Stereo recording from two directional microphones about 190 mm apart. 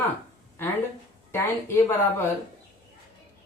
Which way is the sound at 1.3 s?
15° left (ahead or behind).